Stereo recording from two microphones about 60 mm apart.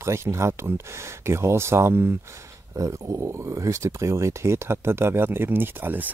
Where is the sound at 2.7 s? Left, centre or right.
Right.